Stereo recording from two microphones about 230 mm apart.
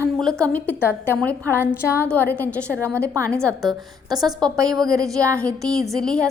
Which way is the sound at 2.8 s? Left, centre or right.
Centre.